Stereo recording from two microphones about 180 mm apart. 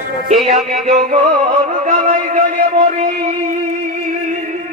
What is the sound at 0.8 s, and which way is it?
Music, 45° right (ahead or behind).